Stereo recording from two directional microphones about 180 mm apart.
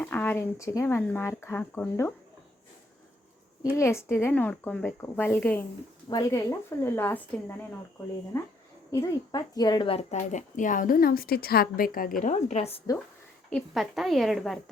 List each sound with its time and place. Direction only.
0.0 s speech: 10° left (ahead or behind)
3.6 s speech: 15° left (ahead or behind)
6.1 s speech: 20° left (ahead or behind); by 12.8 s 35° left (ahead or behind)
13.5 s speech: centre (ahead or behind)